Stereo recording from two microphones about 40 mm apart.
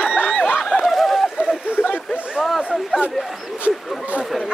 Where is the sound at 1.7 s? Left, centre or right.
Left.